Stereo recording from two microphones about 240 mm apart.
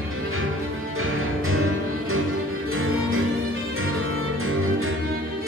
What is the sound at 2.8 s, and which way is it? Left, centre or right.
Music, right.